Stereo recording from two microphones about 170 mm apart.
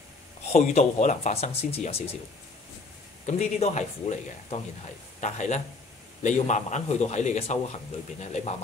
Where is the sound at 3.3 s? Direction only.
40° left (ahead or behind).